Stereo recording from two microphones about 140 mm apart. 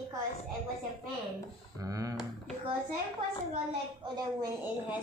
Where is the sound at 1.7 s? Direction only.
25° right (ahead or behind).